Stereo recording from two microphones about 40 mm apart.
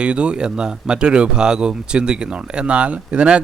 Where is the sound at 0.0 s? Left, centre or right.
Right.